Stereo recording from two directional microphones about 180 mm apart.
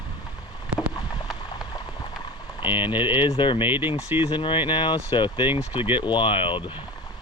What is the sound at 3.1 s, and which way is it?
Speech, 30° left (ahead or behind).